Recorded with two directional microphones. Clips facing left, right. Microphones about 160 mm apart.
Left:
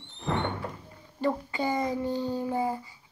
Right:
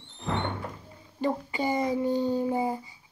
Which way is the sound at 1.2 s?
15° right (ahead or behind).